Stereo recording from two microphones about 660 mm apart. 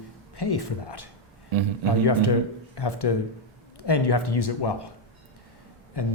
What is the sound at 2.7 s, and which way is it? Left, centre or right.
Speech, left.